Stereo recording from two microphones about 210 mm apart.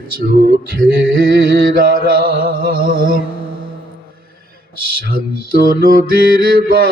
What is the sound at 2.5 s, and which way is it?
Speech, 45° right (ahead or behind).